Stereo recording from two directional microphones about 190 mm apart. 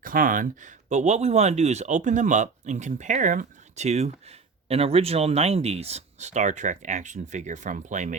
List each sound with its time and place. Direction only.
0.0 s speech: 45° right (ahead or behind)